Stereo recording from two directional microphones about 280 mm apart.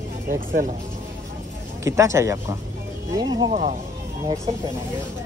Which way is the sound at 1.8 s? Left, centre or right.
Centre.